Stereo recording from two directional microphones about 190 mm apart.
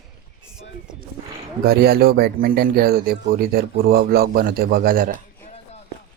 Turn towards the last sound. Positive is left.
turn(degrees=-50)  # may be behind; listen again after turning